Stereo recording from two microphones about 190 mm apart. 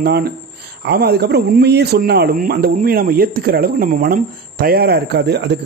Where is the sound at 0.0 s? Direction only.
55° right (ahead or behind).